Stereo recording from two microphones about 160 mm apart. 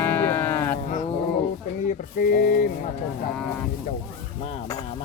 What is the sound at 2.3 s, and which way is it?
Speech, 60° left (ahead or behind).